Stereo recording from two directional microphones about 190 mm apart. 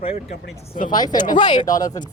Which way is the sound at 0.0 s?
30° left (ahead or behind).